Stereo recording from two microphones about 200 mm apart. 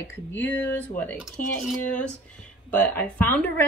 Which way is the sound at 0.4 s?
10° left (ahead or behind).